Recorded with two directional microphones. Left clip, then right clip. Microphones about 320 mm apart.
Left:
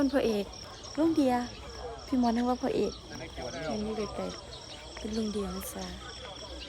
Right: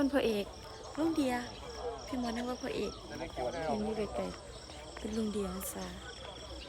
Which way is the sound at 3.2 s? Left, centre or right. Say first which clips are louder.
Right 2 dB; right.